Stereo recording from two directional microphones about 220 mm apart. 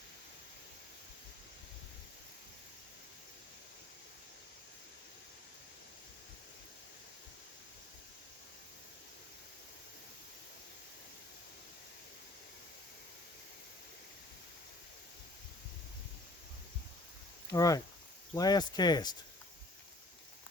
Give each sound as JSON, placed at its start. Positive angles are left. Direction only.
{"t": 17.5, "sound": "speech", "side_deg": 15}